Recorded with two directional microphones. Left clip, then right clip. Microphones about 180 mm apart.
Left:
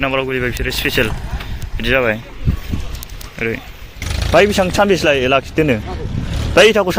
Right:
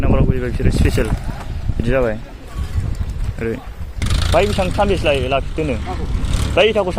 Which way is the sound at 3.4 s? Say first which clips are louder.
Left 3 dB; 10° right (ahead or behind).